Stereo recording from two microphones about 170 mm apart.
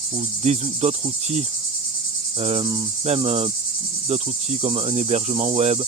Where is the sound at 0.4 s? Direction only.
40° right (ahead or behind).